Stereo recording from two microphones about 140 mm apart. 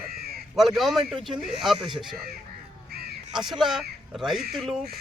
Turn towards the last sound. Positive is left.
turn(degrees=0)  # may be behind; listen again after turning